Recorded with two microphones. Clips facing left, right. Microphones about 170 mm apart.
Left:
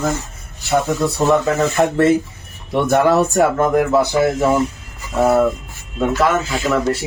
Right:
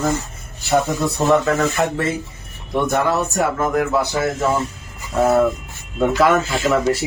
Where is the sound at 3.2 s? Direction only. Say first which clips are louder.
Left 5 dB; 35° left (ahead or behind).